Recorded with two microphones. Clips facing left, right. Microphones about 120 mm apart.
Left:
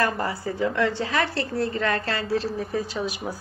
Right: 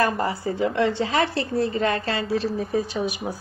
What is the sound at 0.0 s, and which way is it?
A woman's voice, 20° right (ahead or behind).